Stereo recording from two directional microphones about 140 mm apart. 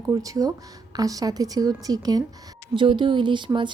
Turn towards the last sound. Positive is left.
turn(degrees=-35)  # may be behind; listen again after turning